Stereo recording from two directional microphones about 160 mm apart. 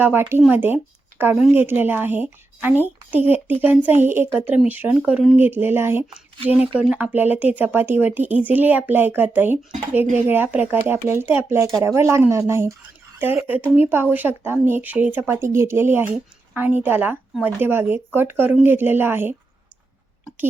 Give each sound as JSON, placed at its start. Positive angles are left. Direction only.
{"t": 0.0, "sound": "speech", "side_deg": -15}